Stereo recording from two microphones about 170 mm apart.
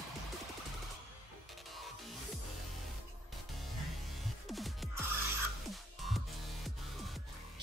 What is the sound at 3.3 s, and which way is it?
Music, centre (ahead or behind).